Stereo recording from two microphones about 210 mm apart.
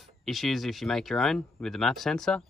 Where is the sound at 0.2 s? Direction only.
Centre (ahead or behind).